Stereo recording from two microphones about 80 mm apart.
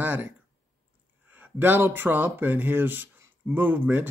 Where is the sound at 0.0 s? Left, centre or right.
Centre.